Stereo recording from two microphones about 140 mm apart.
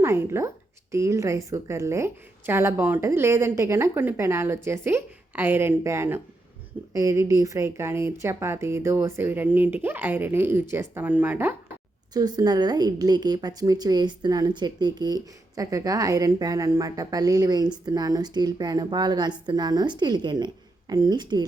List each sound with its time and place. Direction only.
0.0 s a woman's voice: 20° right (ahead or behind)
12.1 s a woman's voice: 30° right (ahead or behind)